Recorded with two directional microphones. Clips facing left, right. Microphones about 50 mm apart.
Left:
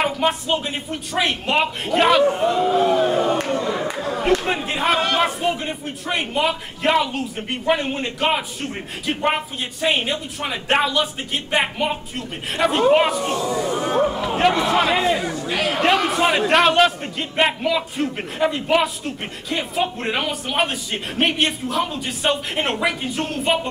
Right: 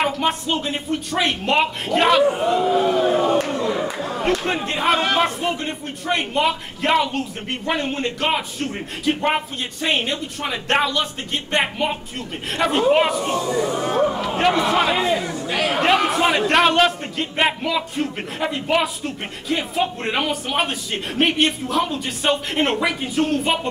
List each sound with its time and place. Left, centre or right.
0.0 s a man's voice: centre
4.2 s a man's voice: centre